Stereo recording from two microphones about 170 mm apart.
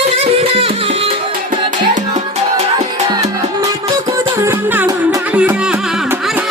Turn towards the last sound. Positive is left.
turn(degrees=-10)  # may be behind; listen again after turning